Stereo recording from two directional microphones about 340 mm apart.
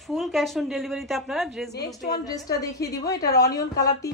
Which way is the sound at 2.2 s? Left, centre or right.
Centre.